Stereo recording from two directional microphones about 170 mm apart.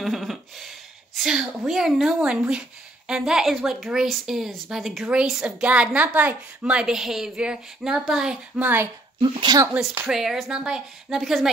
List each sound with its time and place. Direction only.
0.0 s a woman's voice: centre (ahead or behind)
9.2 s speech: 25° right (ahead or behind)
9.7 s a woman's voice: 5° right (ahead or behind)